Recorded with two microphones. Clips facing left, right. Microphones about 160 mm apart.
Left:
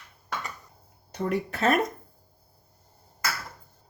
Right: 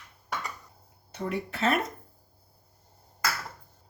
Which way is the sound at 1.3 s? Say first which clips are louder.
Left 3 dB; 45° left (ahead or behind).